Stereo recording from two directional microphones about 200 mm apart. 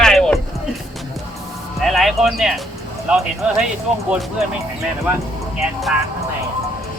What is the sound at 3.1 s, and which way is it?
Speech, 5° right (ahead or behind).